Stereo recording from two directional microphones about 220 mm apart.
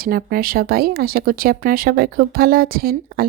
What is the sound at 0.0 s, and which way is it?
Speech, 40° right (ahead or behind).